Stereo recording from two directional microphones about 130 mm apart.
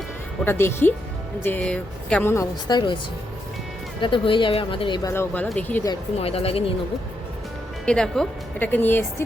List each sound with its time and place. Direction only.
0.4 s speech: 15° left (ahead or behind)
2.3 s a woman's voice: 30° left (ahead or behind)
4.0 s a woman's voice: 40° left (ahead or behind)
5.0 s speech: 20° left (ahead or behind)
6.1 s speech: 50° left (ahead or behind)
7.9 s speech: 5° left (ahead or behind)
8.5 s speech: 15° left (ahead or behind)